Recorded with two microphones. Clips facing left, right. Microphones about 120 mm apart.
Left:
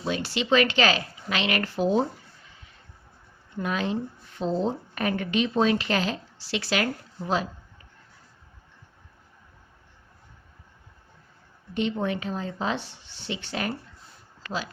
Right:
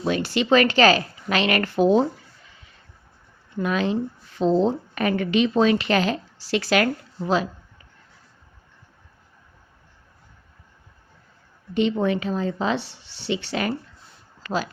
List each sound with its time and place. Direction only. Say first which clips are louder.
0.0 s speech: right 5 dB; 55° right (ahead or behind)
3.6 s speech: right 5 dB; 90° right; by 6.1 s 70° right (ahead or behind)
6.4 s speech: right 6 dB; 45° right (ahead or behind)
11.7 s speech: right 6 dB; 90° right